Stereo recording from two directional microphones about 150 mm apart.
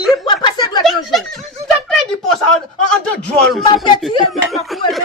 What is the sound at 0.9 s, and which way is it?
Snicker, centre (ahead or behind).